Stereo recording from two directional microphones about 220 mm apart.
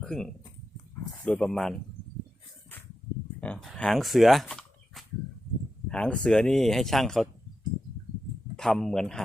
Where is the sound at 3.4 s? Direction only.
5° left (ahead or behind).